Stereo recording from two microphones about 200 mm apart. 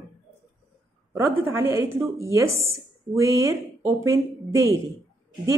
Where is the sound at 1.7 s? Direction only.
15° right (ahead or behind).